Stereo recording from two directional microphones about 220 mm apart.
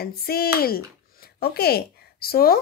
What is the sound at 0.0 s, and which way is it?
Speech, 45° left (ahead or behind).